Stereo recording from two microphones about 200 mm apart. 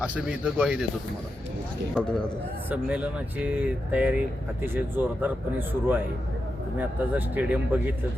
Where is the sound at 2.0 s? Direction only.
5° left (ahead or behind).